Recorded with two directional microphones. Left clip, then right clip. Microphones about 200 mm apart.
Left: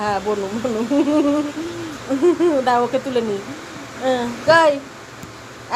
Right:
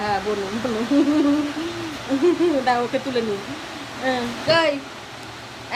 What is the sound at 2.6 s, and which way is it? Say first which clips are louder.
A child's voice: left 3 dB; 10° left (ahead or behind).